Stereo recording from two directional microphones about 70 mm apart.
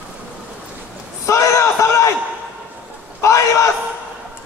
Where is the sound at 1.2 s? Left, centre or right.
Left.